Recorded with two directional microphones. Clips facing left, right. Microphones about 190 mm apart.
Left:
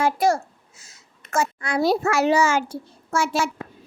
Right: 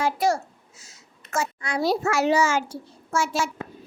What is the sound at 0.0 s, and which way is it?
A child's voice, 50° left (ahead or behind).